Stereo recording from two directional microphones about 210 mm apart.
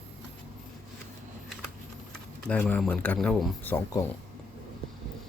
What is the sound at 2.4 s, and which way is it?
Speech, 10° left (ahead or behind).